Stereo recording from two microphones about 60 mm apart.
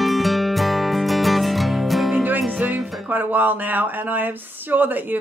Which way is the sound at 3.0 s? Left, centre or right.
Right.